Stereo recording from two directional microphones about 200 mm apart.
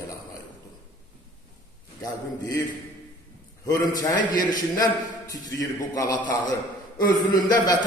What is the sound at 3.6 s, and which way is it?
A man's voice, 20° left (ahead or behind).